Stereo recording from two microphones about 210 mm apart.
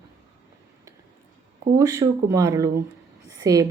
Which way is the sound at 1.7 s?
15° right (ahead or behind).